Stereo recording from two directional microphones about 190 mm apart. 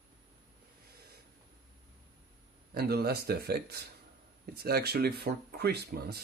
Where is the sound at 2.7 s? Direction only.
55° right (ahead or behind).